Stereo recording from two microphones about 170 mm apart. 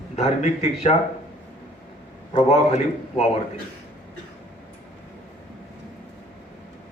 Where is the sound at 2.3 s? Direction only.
40° left (ahead or behind).